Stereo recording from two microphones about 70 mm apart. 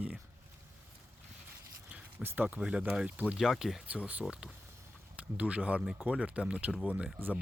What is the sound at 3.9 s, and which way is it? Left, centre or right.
Speech, centre.